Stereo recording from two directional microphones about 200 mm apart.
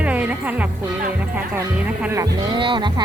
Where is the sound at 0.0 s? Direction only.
5° right (ahead or behind).